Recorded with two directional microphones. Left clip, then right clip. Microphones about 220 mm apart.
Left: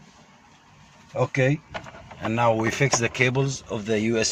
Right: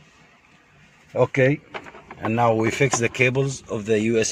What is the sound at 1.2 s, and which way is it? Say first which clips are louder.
Speech: right 4 dB; 35° right (ahead or behind).